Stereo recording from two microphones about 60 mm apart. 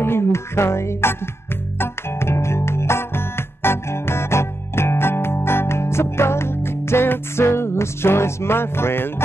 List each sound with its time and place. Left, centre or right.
0.0 s music: left